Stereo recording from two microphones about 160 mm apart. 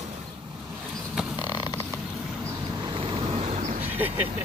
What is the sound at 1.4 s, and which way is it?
Vehicle, 25° left (ahead or behind).